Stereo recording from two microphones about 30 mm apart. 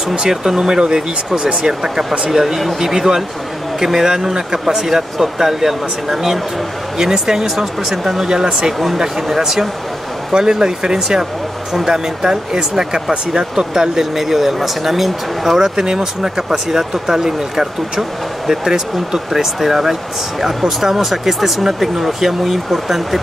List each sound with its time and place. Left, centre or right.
0.1 s speech: right
2.3 s speech: centre
7.0 s speech: centre
7.5 s speech: centre
8.3 s speech: right
8.7 s speech: centre
10.3 s speech: right; by 15.7 s centre
15.7 s speech: right; by 23.2 s centre